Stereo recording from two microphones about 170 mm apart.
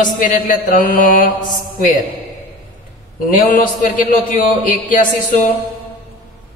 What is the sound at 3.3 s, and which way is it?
Speech, 50° left (ahead or behind).